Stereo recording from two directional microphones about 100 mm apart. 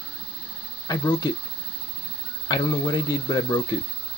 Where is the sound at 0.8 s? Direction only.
40° left (ahead or behind).